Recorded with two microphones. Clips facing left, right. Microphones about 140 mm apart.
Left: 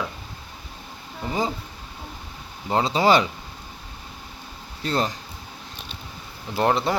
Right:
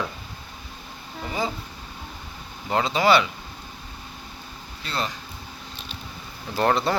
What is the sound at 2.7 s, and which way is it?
Speech, 30° left (ahead or behind).